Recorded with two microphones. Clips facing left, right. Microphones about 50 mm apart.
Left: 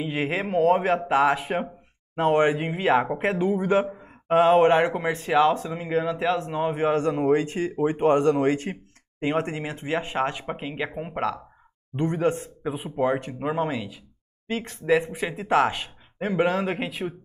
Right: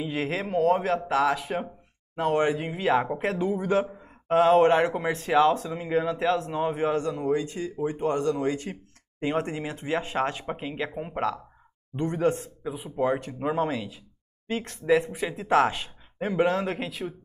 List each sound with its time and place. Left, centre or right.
0.0 s speech: left
7.0 s speech: left
9.2 s speech: left
12.6 s speech: left
13.0 s speech: left
15.0 s speech: left